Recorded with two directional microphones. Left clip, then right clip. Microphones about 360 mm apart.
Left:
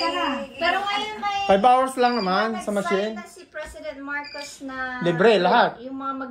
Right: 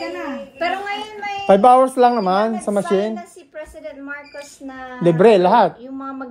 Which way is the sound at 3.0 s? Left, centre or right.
Right.